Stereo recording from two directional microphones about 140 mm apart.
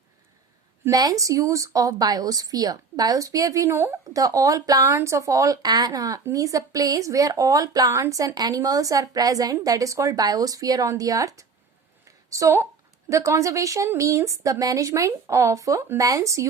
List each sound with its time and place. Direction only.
0.9 s speech: 25° right (ahead or behind)
12.0 s a sound: 20° right (ahead or behind)
13.1 s speech: 20° right (ahead or behind)